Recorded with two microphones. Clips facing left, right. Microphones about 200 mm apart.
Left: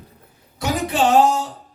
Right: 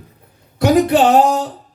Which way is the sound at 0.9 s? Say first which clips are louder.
Right 4 dB; 60° right (ahead or behind).